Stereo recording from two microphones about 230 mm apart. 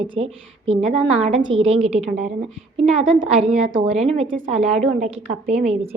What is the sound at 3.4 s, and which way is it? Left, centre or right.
A woman's voice, right.